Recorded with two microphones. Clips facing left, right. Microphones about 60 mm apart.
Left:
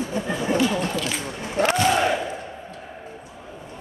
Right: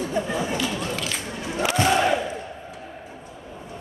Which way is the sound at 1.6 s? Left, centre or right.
Left.